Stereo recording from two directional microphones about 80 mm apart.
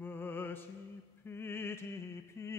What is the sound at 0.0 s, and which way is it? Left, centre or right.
Music, left.